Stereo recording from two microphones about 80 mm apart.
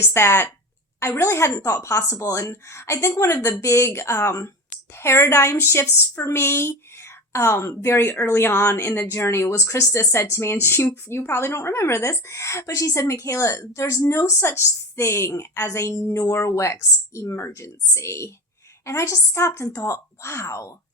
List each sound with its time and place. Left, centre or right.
0.0 s speech: left